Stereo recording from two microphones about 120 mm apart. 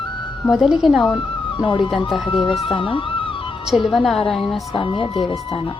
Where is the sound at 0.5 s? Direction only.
5° right (ahead or behind).